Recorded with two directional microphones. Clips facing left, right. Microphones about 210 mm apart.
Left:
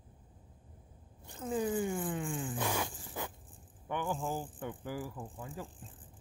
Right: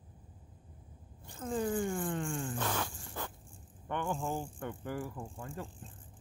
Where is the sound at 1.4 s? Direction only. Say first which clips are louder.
Even; 10° left (ahead or behind).